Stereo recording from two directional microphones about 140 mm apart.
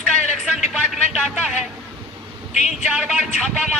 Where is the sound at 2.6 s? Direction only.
5° right (ahead or behind).